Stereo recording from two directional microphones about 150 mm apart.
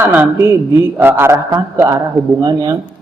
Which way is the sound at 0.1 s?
15° right (ahead or behind).